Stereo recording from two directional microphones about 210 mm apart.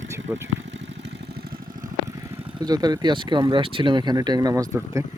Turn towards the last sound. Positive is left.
turn(degrees=-15)  # may be behind; listen again after turning